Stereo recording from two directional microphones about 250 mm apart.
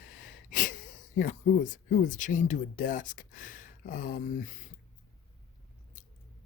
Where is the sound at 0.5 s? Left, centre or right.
Left.